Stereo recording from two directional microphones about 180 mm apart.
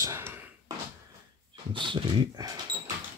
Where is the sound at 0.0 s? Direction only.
15° right (ahead or behind).